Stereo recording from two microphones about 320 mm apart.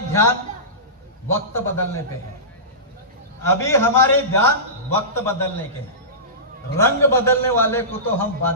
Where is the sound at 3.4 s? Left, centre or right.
Centre.